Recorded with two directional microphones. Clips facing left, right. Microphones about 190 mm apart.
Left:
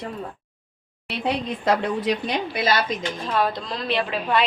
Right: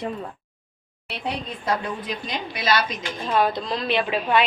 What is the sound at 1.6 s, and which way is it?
Speech, 85° left.